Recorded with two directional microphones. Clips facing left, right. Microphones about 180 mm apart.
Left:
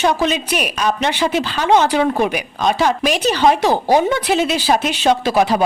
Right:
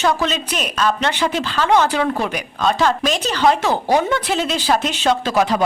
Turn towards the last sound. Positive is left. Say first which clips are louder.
# left 2 dB
turn(degrees=15)  # may be behind; listen again after turning